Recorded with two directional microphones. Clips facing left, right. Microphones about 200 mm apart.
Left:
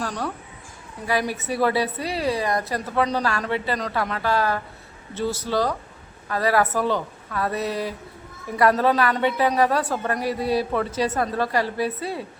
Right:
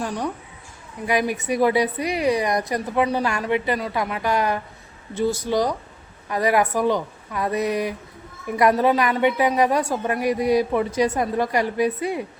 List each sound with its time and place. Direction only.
0.0 s a woman's voice: 15° right (ahead or behind)